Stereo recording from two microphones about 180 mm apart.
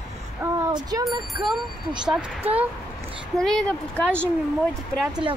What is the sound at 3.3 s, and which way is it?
Speech, 5° left (ahead or behind).